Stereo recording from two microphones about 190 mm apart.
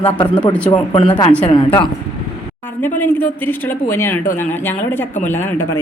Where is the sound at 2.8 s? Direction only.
10° left (ahead or behind).